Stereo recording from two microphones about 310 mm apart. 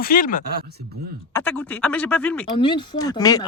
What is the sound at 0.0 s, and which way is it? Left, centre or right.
Speech, left.